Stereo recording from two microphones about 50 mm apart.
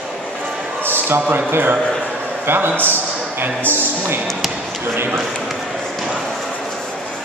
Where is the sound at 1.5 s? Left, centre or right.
Right.